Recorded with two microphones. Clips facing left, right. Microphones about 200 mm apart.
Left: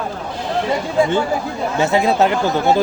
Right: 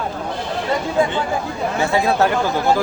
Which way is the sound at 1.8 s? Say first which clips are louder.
Left 2 dB; 20° left (ahead or behind).